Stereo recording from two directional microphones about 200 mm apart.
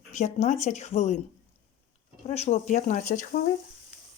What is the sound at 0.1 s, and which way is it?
Speech, 35° left (ahead or behind).